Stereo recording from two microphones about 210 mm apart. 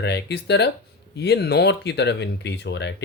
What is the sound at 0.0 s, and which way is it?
Speech, 50° left (ahead or behind).